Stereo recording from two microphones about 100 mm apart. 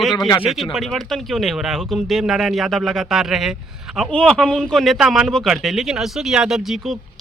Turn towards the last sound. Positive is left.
turn(degrees=-5)  # may be behind; listen again after turning